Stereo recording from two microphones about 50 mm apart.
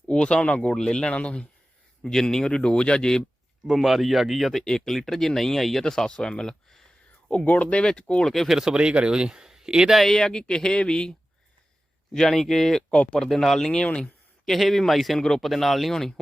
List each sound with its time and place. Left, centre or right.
0.1 s speech: centre
0.7 s speech: centre
2.0 s speech: centre
3.7 s speech: centre
7.4 s speech: left
8.4 s a man's voice: centre
9.9 s speech: centre
10.2 s speech: centre
12.9 s speech: left
13.1 s speech: centre
13.8 s speech: left
14.4 s speech: centre